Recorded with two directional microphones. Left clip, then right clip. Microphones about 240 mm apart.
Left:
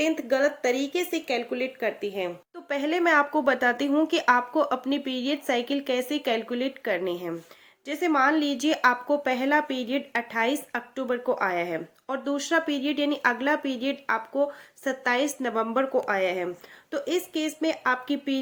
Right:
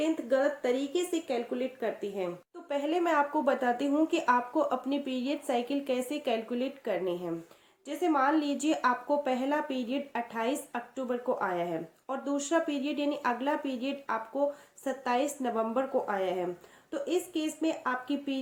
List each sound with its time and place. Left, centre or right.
0.0 s a woman's voice: left